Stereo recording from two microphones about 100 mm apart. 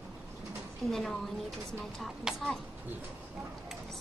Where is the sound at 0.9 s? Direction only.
Centre (ahead or behind).